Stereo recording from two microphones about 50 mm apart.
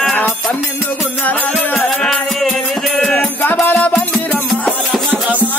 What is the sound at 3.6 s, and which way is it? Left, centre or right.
Music, left.